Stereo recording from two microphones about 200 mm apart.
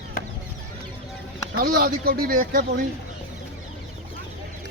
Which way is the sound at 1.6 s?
50° right (ahead or behind).